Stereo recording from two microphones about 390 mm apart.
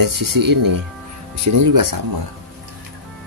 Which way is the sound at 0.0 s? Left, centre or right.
Right.